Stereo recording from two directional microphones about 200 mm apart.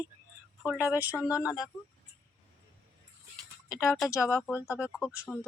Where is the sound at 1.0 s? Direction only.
10° right (ahead or behind).